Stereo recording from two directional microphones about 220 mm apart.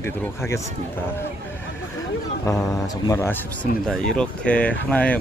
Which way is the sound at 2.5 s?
15° left (ahead or behind).